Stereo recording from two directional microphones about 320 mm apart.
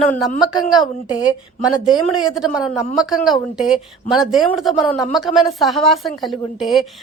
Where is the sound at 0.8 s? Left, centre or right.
Centre.